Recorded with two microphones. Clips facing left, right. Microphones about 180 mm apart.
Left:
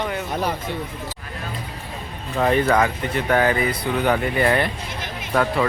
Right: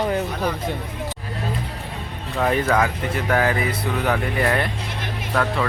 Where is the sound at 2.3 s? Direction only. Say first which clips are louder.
Left 2 dB; centre (ahead or behind).